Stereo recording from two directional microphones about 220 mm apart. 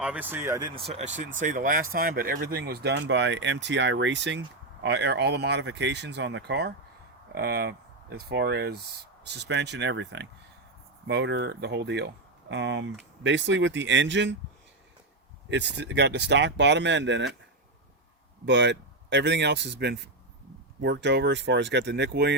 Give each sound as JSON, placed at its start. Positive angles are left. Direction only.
{"t": 0.0, "sound": "speech", "side_deg": -5}
{"t": 1.4, "sound": "speech", "side_deg": -35}
{"t": 15.4, "sound": "speech", "side_deg": -50}
{"t": 18.4, "sound": "speech", "side_deg": -55}